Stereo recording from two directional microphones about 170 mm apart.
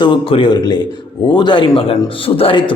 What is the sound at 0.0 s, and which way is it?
A man's voice, 30° left (ahead or behind).